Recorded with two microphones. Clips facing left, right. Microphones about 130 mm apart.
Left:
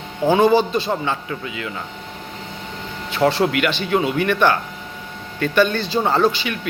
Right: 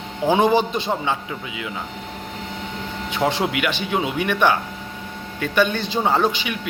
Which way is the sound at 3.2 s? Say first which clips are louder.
Left 4 dB; 15° right (ahead or behind).